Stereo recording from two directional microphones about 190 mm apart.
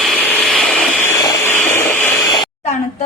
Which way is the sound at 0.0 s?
5° left (ahead or behind).